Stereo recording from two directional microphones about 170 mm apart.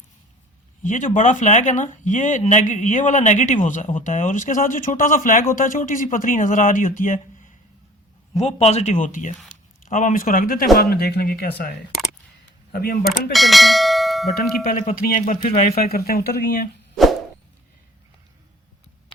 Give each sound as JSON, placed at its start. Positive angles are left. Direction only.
{"t": 0.8, "sound": "speech", "side_deg": 45}
{"t": 8.4, "sound": "speech", "side_deg": 40}
{"t": 12.7, "sound": "speech", "side_deg": 60}
{"t": 13.3, "sound": "bell", "side_deg": 0}
{"t": 14.6, "sound": "speech", "side_deg": 55}